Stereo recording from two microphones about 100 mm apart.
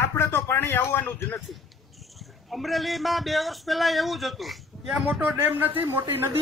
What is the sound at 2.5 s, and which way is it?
Speech, centre (ahead or behind).